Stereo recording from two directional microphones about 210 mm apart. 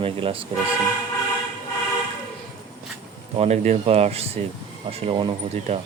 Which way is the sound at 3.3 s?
30° right (ahead or behind).